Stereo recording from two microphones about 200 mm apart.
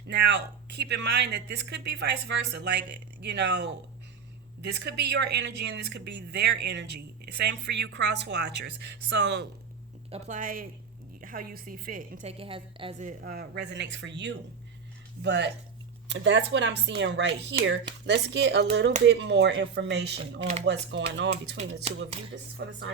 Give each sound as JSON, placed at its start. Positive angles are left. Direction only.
{"t": 0.1, "sound": "speech", "side_deg": -55}
{"t": 10.1, "sound": "a woman's voice", "side_deg": -40}
{"t": 20.4, "sound": "speech", "side_deg": -35}
{"t": 20.7, "sound": "speech", "side_deg": -65}
{"t": 21.6, "sound": "speech", "side_deg": -30}
{"t": 22.6, "sound": "speech", "side_deg": -55}